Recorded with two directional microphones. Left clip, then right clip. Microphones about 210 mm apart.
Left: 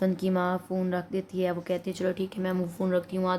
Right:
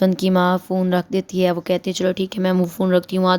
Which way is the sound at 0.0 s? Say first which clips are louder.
Right 10 dB; 40° right (ahead or behind).